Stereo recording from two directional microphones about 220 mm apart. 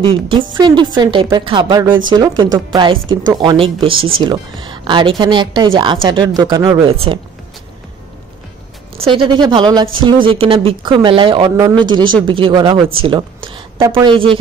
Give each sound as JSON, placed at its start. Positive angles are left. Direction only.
{"t": 0.0, "sound": "speech", "side_deg": -25}
{"t": 9.0, "sound": "speech", "side_deg": -25}